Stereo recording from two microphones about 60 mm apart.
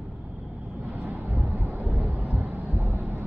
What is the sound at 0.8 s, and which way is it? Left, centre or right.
Vehicle, right.